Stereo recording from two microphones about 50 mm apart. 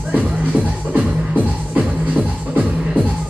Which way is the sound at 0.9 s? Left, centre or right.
Right.